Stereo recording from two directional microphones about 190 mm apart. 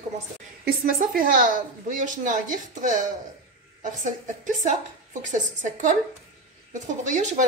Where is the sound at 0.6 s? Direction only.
50° right (ahead or behind).